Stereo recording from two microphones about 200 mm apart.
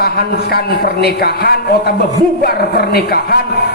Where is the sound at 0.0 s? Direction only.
50° left (ahead or behind).